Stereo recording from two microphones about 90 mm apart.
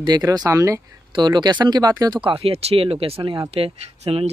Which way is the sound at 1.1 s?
55° right (ahead or behind).